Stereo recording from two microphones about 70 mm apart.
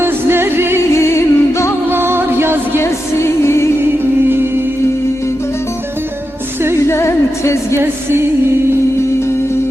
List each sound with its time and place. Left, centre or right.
0.0 s music: right
0.9 s music: left
1.9 s music: right
2.8 s music: left
6.8 s music: left